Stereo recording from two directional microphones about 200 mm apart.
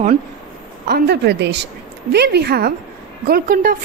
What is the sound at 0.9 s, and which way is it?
A woman's voice, 55° right (ahead or behind).